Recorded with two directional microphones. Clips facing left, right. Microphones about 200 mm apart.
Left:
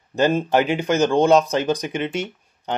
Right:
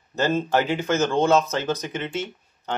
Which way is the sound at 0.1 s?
15° left (ahead or behind).